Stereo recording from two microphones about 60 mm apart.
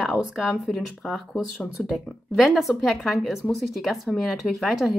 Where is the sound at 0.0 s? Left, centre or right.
Centre.